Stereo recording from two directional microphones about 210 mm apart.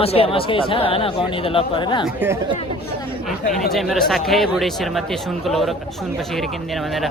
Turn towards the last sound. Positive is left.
turn(degrees=0)  # may be behind; listen again after turning